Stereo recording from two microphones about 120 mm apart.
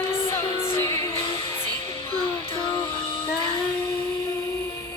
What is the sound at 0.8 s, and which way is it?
Music, 20° left (ahead or behind).